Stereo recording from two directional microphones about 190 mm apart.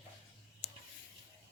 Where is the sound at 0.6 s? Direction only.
35° left (ahead or behind).